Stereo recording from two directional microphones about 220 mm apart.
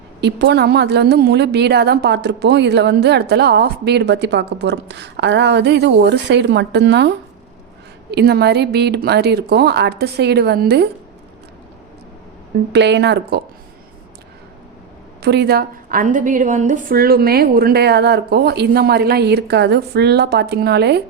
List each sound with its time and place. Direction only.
0.2 s a woman's voice: 50° right (ahead or behind)
12.7 s a woman's voice: 50° right (ahead or behind)
15.2 s a woman's voice: 50° right (ahead or behind)